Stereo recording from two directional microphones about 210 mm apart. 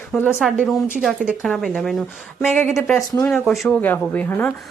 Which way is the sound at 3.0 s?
15° left (ahead or behind).